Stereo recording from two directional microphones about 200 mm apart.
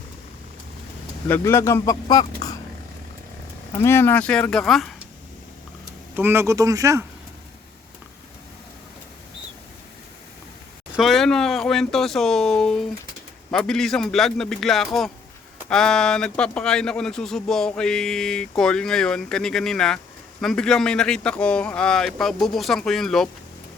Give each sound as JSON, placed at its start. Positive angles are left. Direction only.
{"t": 1.3, "sound": "speech", "side_deg": 10}
{"t": 3.7, "sound": "speech", "side_deg": 10}
{"t": 6.1, "sound": "speech", "side_deg": -10}
{"t": 10.9, "sound": "speech", "side_deg": 0}